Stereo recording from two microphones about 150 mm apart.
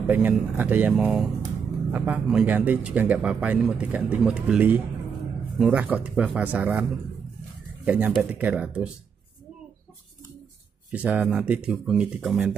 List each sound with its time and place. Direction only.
0.0 s speech: 10° right (ahead or behind)
10.9 s speech: 10° right (ahead or behind)